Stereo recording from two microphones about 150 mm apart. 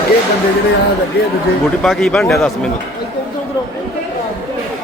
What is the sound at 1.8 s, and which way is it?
Speech, 5° left (ahead or behind).